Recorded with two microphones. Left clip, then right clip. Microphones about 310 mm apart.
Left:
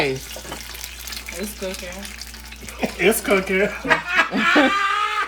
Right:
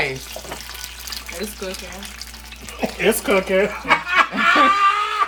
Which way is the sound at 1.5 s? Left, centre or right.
Centre.